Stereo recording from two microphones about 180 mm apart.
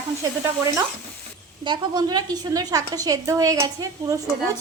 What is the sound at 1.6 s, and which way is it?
Sizzle, 25° right (ahead or behind).